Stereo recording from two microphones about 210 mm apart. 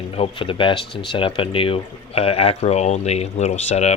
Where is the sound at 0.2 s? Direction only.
25° left (ahead or behind).